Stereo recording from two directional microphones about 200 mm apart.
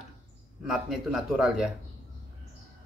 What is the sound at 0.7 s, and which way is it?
A man's voice, centre (ahead or behind).